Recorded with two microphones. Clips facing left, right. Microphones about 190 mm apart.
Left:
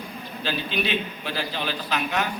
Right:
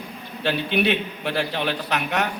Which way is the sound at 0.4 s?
65° right (ahead or behind).